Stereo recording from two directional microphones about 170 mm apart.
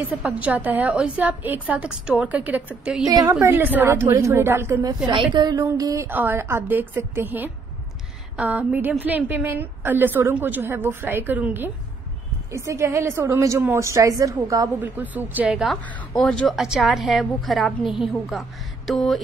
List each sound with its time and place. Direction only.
0.2 s a woman's voice: 10° right (ahead or behind)
3.1 s a woman's voice: 20° right (ahead or behind); by 15.8 s centre (ahead or behind)
15.8 s a woman's voice: 10° left (ahead or behind)